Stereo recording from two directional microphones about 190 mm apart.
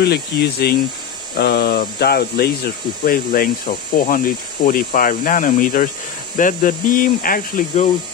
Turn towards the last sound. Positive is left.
turn(degrees=45)  # may be behind; listen again after turning